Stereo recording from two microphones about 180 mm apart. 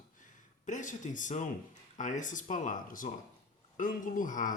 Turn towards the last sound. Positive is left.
turn(degrees=45)  # may be behind; listen again after turning